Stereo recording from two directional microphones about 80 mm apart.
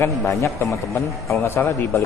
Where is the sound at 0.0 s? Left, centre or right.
Left.